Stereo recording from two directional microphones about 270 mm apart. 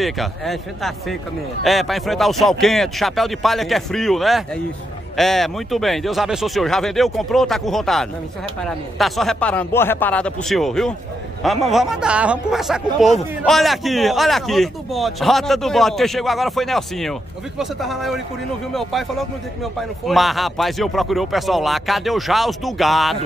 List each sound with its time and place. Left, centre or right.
0.0 s a man's voice: centre